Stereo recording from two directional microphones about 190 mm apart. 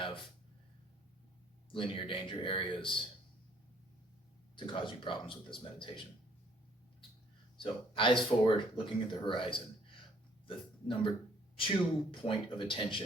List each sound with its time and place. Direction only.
0.0 s a sound: 25° left (ahead or behind)
1.7 s speech: 25° left (ahead or behind)
4.5 s speech: 25° left (ahead or behind)
7.6 s speech: 25° left (ahead or behind)
12.1 s speech: 25° left (ahead or behind)